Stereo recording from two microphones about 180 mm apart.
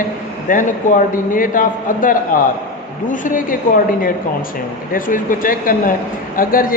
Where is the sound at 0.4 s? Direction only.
45° left (ahead or behind).